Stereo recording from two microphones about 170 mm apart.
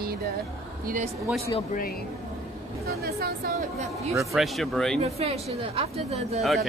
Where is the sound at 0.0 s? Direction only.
60° right (ahead or behind).